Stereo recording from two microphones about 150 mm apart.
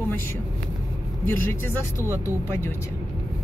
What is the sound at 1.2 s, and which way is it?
Speech, 15° left (ahead or behind).